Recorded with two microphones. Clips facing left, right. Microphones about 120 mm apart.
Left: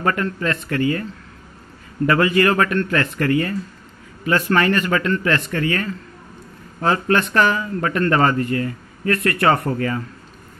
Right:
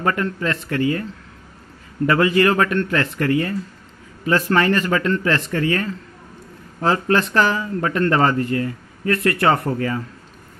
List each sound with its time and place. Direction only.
0.0 s speech: 20° right (ahead or behind)
2.0 s speech: 25° right (ahead or behind)
9.8 s speech: 15° right (ahead or behind)